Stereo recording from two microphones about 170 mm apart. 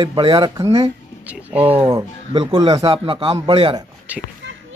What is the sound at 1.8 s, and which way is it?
Speech, 20° right (ahead or behind).